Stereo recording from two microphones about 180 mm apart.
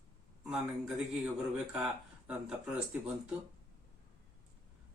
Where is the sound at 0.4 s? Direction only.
5° right (ahead or behind).